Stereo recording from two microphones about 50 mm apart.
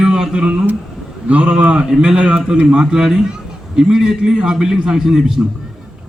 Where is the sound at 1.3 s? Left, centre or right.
Right.